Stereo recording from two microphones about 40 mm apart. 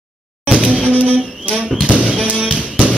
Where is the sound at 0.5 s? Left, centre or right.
Right.